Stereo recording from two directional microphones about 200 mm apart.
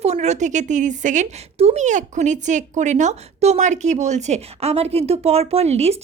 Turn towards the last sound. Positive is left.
turn(degrees=-30)  # may be behind; listen again after turning